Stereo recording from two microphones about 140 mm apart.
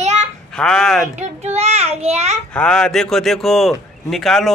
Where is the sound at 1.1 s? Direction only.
55° right (ahead or behind).